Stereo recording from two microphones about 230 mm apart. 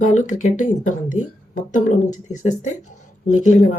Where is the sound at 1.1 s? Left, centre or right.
Left.